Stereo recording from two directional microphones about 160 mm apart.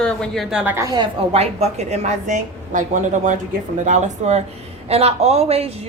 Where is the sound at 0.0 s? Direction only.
5° left (ahead or behind).